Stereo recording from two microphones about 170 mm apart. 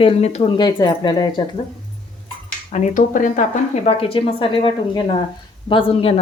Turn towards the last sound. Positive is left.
turn(degrees=35)  # may be behind; listen again after turning